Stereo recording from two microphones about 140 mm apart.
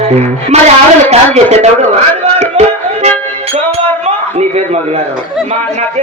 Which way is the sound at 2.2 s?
50° right (ahead or behind).